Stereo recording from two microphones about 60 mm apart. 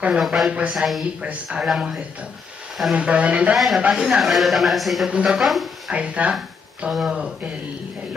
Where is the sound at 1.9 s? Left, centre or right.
Centre.